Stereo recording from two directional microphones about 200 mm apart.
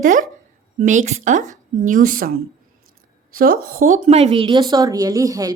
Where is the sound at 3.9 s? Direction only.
35° right (ahead or behind); by 5.5 s 15° right (ahead or behind).